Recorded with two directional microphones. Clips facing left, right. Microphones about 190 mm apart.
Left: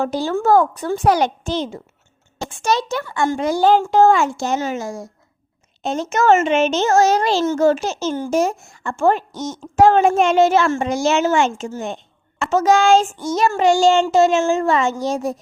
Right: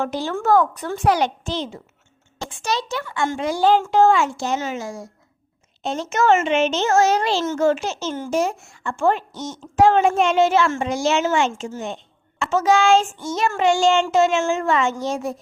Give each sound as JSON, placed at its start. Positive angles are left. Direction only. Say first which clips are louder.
{"t": 0.0, "sound": "a woman's voice", "louder": "left 4 dB", "side_deg": 35}